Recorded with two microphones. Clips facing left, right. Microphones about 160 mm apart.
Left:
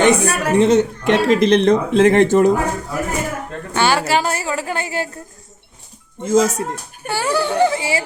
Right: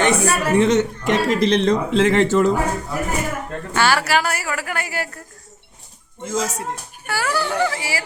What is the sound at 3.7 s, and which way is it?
A woman's voice, 20° left (ahead or behind).